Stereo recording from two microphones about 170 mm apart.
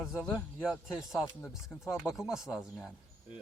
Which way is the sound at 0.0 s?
Centre (ahead or behind).